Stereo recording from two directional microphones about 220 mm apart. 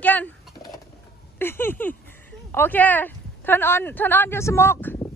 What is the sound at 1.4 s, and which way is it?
Speech, 10° left (ahead or behind).